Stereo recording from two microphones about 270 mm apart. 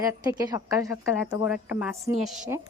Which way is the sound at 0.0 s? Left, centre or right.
Centre.